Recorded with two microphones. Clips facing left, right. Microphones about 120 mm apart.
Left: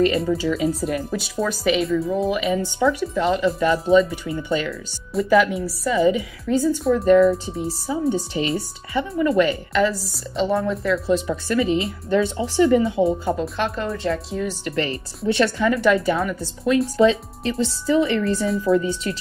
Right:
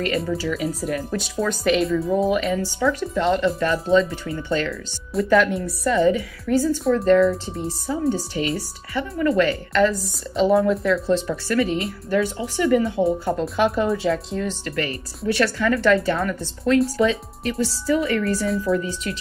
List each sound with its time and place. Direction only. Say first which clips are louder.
0.3 s speech: left 3 dB; 25° left (ahead or behind)
1.1 s speech: even; 5° left (ahead or behind)
2.5 s speech: left 2 dB; 20° left (ahead or behind); by 3.6 s 5° left (ahead or behind)
3.6 s speech: left 4 dB; 15° left (ahead or behind)
5.1 s speech: left 1 dB; centre (ahead or behind)
6.0 s speech: even; 15° left (ahead or behind)
6.8 s speech: left 2 dB; centre (ahead or behind)
8.4 s speech: left 1 dB; 25° left (ahead or behind); by 11.0 s centre (ahead or behind)
11.1 s speech: even; 15° left (ahead or behind)
13.6 s speech: right 5 dB; 5° right (ahead or behind)
14.6 s speech: left 2 dB; 25° left (ahead or behind); by 16.7 s 10° left (ahead or behind)
16.9 s speech: left 4 dB; 30° left (ahead or behind)